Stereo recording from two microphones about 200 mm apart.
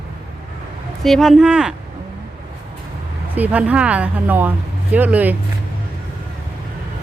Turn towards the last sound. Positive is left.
turn(degrees=-10)  # may be behind; listen again after turning